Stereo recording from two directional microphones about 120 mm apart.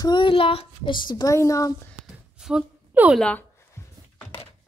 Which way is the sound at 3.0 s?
15° right (ahead or behind).